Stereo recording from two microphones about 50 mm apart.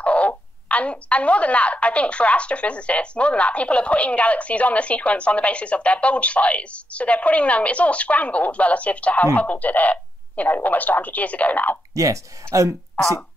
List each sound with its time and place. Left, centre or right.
0.0 s speech: left
11.9 s speech: right